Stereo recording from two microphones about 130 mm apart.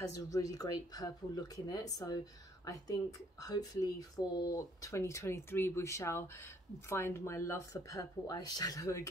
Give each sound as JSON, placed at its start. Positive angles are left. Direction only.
{"t": 0.0, "sound": "speech", "side_deg": 25}